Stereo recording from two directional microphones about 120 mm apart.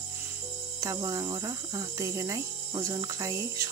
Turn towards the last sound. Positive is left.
turn(degrees=-25)  # may be behind; listen again after turning